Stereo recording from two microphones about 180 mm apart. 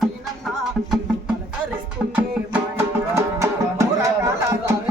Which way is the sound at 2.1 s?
10° right (ahead or behind).